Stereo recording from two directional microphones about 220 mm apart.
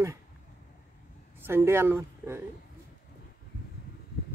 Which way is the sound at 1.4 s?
10° right (ahead or behind).